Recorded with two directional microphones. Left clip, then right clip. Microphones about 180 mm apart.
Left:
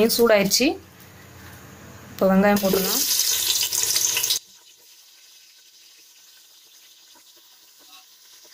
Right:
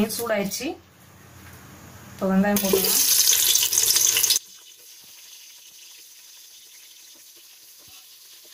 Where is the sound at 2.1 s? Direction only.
55° left (ahead or behind).